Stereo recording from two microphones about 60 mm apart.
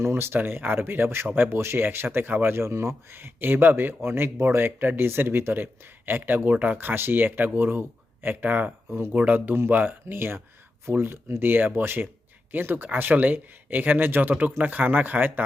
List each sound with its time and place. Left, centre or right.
0.0 s speech: right